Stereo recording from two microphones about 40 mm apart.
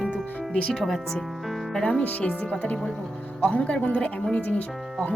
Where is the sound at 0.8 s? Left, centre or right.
Centre.